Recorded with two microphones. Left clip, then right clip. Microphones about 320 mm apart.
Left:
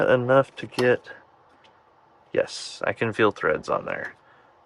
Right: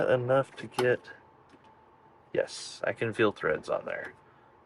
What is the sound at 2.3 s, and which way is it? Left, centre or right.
Speech, left.